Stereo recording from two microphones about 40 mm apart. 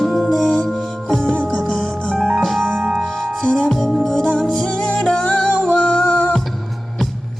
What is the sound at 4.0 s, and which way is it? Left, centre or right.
Music, centre.